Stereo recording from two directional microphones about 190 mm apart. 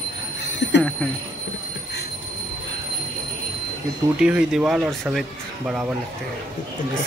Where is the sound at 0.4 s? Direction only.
65° left (ahead or behind).